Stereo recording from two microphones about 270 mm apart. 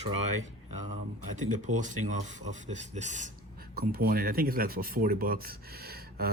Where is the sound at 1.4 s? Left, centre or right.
Right.